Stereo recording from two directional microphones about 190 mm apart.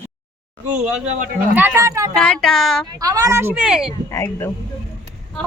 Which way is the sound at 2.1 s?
5° left (ahead or behind).